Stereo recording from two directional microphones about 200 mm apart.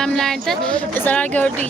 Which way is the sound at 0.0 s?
Centre (ahead or behind).